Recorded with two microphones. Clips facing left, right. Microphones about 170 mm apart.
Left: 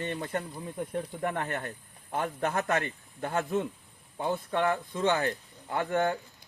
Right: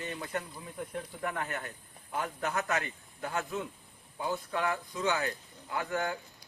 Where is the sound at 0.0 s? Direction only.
35° left (ahead or behind).